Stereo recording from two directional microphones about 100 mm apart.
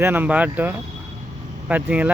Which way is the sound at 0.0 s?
20° right (ahead or behind).